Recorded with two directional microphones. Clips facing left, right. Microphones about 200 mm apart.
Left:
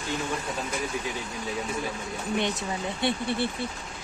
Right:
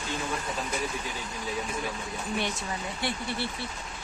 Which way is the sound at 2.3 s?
20° left (ahead or behind).